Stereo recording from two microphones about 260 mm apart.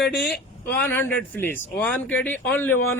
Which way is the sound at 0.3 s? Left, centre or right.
Left.